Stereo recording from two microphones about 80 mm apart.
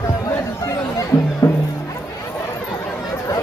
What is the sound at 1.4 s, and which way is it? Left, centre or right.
Music, left.